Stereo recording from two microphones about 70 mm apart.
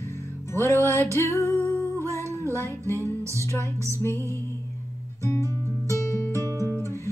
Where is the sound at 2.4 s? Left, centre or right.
Right.